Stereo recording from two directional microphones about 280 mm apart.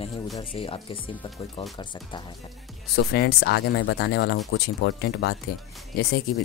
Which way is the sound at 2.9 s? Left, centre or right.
Left.